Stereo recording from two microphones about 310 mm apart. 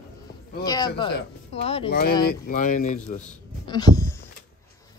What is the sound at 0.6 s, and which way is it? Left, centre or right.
A woman's voice, centre.